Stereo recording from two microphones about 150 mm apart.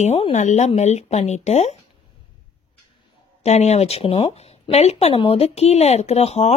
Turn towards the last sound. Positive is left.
turn(degrees=45)  # may be behind; listen again after turning